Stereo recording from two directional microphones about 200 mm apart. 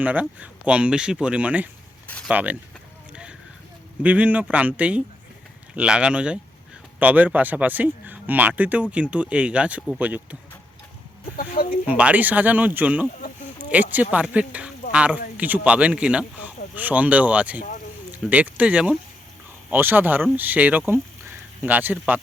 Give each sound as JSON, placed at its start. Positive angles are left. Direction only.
{"t": 0.0, "sound": "speech", "side_deg": -10}
{"t": 2.0, "sound": "a sound", "side_deg": 5}
{"t": 2.3, "sound": "speech", "side_deg": -10}
{"t": 4.0, "sound": "speech", "side_deg": -5}
{"t": 11.3, "sound": "speech", "side_deg": 45}
{"t": 11.9, "sound": "speech", "side_deg": -5}